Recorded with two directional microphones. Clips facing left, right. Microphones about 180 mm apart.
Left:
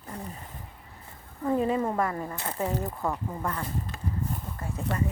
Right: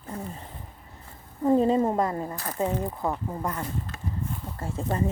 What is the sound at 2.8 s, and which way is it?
Speech, 15° right (ahead or behind).